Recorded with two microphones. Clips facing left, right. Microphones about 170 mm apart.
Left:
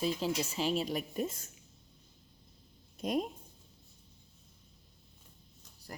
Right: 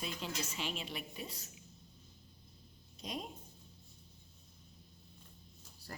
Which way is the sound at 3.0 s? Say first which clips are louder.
Left 11 dB; 50° left (ahead or behind).